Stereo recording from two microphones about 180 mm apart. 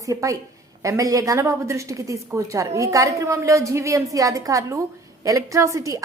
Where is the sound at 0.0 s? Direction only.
20° right (ahead or behind).